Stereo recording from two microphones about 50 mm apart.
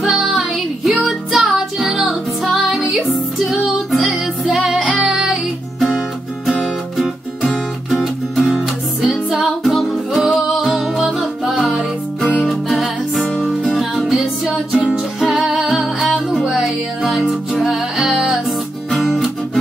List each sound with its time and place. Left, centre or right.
0.0 s music: centre
18.9 s music: centre